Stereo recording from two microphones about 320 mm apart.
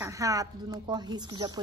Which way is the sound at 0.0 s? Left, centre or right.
Centre.